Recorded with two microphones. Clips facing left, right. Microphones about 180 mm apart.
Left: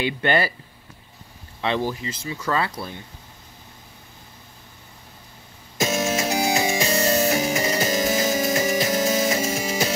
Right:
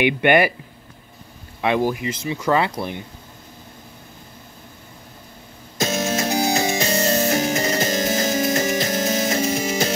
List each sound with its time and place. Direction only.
0.0 s speech: 15° right (ahead or behind)
1.6 s speech: 15° right (ahead or behind)
5.8 s music: 40° right (ahead or behind)
8.1 s music: centre (ahead or behind)